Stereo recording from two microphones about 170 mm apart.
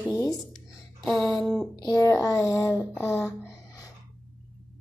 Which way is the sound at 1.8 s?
20° left (ahead or behind).